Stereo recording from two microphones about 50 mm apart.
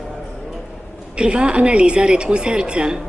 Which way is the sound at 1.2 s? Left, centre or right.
Centre.